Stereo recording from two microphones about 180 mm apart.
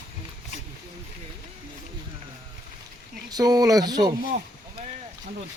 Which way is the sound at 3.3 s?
20° right (ahead or behind).